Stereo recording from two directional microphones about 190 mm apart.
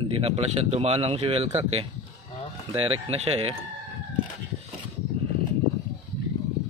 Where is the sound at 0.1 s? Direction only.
30° right (ahead or behind).